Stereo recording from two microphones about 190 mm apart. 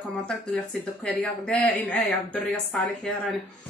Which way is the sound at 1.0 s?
5° left (ahead or behind).